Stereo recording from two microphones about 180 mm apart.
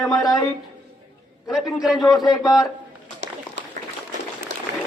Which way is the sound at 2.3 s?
20° left (ahead or behind).